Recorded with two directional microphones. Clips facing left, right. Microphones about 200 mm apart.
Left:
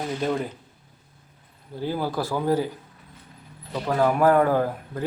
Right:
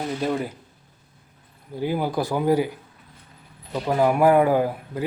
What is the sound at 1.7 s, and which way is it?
Speech, 15° right (ahead or behind).